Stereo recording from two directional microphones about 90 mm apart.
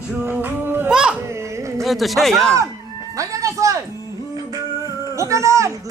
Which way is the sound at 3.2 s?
35° right (ahead or behind).